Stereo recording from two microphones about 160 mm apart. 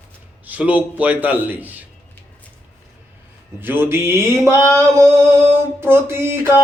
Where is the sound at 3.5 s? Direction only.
15° right (ahead or behind).